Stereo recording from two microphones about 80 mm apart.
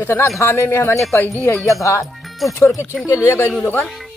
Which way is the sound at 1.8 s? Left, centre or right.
Left.